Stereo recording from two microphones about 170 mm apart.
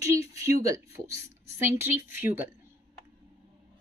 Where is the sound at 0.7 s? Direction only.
15° right (ahead or behind).